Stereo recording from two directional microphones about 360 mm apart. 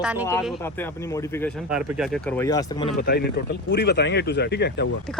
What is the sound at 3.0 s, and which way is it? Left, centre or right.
Speech, left.